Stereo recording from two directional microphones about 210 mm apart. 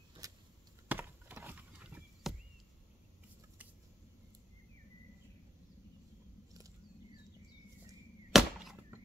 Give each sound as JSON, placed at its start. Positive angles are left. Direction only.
{"t": 0.2, "sound": "a sound", "side_deg": -15}
{"t": 0.8, "sound": "chop", "side_deg": -10}
{"t": 8.3, "sound": "chop", "side_deg": 0}